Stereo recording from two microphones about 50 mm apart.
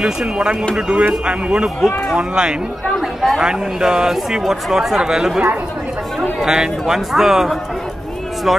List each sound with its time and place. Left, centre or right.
0.4 s a man's voice: centre
3.0 s speech: centre
6.4 s speech: centre